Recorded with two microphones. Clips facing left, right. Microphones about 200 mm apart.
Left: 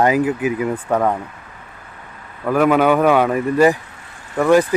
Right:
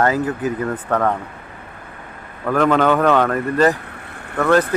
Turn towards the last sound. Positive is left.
turn(degrees=10)  # may be behind; listen again after turning